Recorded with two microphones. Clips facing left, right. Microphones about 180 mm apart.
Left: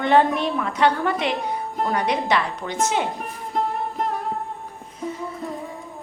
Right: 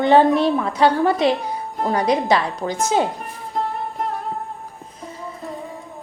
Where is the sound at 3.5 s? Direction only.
Centre (ahead or behind).